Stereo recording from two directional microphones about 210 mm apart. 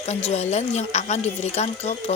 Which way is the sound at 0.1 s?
30° left (ahead or behind).